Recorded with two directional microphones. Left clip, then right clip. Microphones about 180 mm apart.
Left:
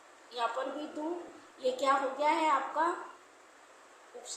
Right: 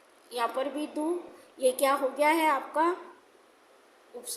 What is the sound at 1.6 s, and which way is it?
A woman's voice, 40° right (ahead or behind).